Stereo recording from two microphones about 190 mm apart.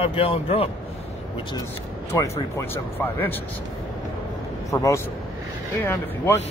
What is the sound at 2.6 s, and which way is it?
Speech, 10° left (ahead or behind).